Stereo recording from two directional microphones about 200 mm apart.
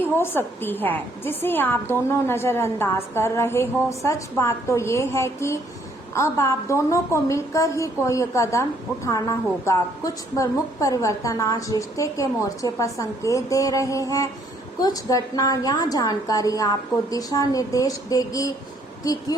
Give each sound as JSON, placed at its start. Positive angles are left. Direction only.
{"t": 0.0, "sound": "a woman's voice", "side_deg": 10}